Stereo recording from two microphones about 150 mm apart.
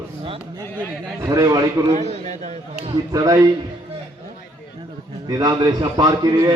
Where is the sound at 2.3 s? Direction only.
50° right (ahead or behind).